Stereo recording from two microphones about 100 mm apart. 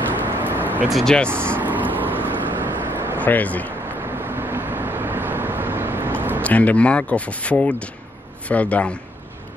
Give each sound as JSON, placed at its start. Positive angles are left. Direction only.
{"t": 0.4, "sound": "vehicle", "side_deg": -20}
{"t": 0.8, "sound": "speech", "side_deg": 0}
{"t": 1.3, "sound": "vehicle", "side_deg": -20}
{"t": 3.2, "sound": "speech", "side_deg": 15}
{"t": 4.2, "sound": "vehicle", "side_deg": -20}
{"t": 6.4, "sound": "speech", "side_deg": 15}